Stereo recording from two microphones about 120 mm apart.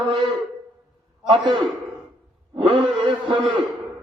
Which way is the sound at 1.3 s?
40° right (ahead or behind).